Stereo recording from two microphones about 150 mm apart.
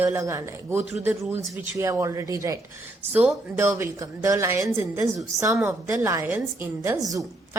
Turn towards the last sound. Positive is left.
turn(degrees=-20)  # may be behind; listen again after turning